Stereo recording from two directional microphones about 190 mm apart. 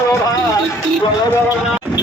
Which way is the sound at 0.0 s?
15° left (ahead or behind).